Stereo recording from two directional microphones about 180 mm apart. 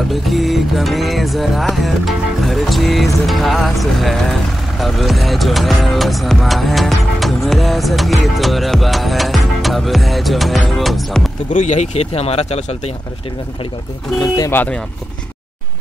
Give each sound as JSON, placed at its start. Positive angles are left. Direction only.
{"t": 0.1, "sound": "music", "side_deg": 0}
{"t": 11.5, "sound": "speech", "side_deg": 40}
{"t": 14.2, "sound": "speech", "side_deg": 20}